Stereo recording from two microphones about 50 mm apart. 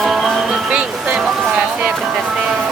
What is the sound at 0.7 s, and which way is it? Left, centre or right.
Music, right.